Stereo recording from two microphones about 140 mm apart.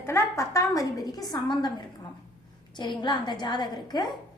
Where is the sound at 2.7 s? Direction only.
35° left (ahead or behind).